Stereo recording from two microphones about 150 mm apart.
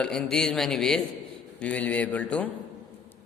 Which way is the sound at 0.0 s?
5° left (ahead or behind).